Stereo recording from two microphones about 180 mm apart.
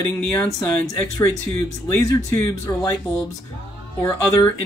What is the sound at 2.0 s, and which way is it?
Speech, 20° left (ahead or behind).